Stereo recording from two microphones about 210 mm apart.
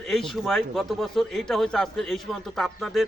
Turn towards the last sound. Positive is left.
turn(degrees=0)  # may be behind; listen again after turning